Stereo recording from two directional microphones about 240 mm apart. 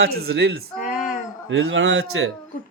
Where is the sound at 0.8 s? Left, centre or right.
Left.